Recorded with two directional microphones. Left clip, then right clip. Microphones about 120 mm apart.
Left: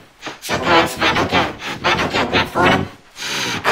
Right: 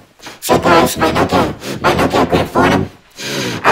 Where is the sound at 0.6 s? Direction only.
15° right (ahead or behind).